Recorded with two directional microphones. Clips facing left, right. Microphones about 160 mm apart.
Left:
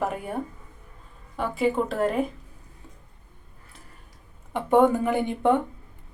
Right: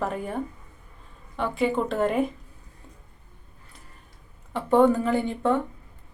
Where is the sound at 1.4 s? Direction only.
5° left (ahead or behind).